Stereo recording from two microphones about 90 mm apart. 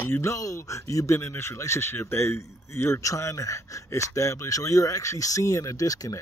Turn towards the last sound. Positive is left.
turn(degrees=40)  # may be behind; listen again after turning